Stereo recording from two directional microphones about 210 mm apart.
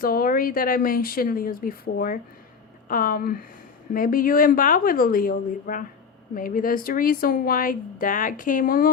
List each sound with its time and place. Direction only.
0.0 s speech: 45° left (ahead or behind)